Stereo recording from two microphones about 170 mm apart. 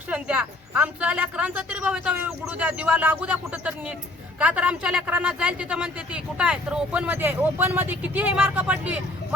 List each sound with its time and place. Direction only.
0.1 s a man's voice: 5° right (ahead or behind)